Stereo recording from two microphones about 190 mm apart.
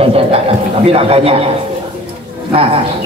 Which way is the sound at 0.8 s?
30° right (ahead or behind).